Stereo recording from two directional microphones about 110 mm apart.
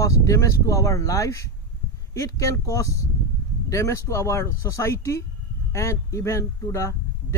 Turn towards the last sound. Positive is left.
turn(degrees=25)  # may be behind; listen again after turning